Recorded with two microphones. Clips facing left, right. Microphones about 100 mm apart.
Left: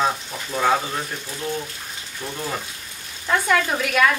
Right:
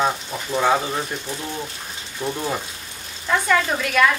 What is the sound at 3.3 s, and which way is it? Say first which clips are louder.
Speech: right 1 dB; centre (ahead or behind).